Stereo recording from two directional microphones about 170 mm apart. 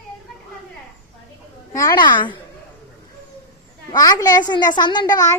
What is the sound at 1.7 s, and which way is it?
Speech, 20° left (ahead or behind).